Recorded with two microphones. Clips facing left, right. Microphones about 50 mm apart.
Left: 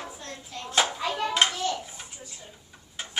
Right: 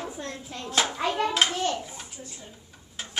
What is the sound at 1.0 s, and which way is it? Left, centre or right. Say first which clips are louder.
Speech: right 3 dB; right.